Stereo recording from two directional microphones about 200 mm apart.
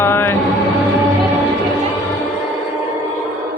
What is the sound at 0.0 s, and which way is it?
Music, 10° left (ahead or behind).